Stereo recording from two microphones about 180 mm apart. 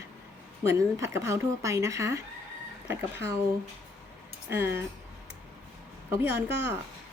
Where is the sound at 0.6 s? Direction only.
15° right (ahead or behind).